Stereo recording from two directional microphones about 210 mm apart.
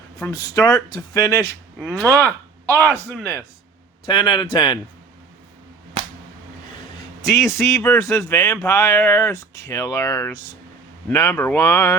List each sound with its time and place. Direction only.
0.2 s speech: 15° left (ahead or behind)
2.0 s speech: 15° right (ahead or behind)
2.2 s speech: 10° left (ahead or behind)
4.0 s speech: 20° left (ahead or behind)
7.2 s speech: 15° left (ahead or behind)